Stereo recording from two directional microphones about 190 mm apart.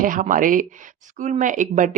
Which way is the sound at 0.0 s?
45° right (ahead or behind).